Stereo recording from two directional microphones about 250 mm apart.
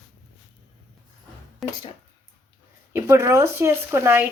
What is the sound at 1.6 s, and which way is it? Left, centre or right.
Speech, centre.